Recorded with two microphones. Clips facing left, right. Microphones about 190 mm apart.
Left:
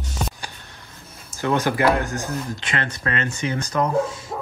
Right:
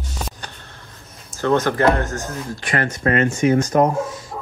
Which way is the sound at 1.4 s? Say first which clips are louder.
Right 3 dB; 15° left (ahead or behind).